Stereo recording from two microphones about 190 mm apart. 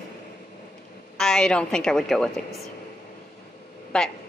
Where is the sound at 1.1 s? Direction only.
5° left (ahead or behind).